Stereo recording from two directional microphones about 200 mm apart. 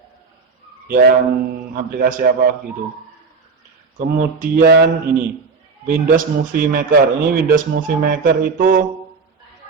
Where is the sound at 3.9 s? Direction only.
40° right (ahead or behind).